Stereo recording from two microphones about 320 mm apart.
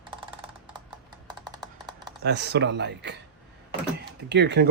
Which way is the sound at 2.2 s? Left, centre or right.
Right.